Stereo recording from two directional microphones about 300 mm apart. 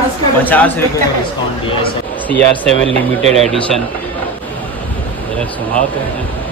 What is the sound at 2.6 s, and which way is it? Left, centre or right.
Speech, right.